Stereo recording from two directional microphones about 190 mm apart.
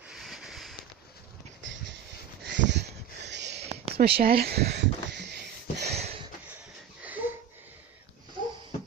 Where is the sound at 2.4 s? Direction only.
65° right (ahead or behind).